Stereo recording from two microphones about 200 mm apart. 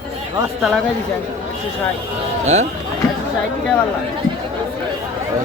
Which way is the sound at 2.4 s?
35° right (ahead or behind).